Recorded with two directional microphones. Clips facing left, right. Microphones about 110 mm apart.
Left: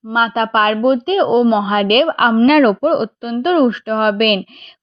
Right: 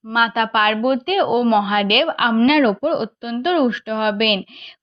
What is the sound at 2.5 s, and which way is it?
Speech, 50° left (ahead or behind).